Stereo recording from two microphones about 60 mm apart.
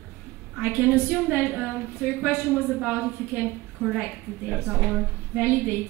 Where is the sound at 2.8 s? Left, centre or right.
Right.